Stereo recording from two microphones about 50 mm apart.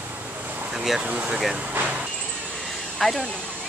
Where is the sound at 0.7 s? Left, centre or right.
Centre.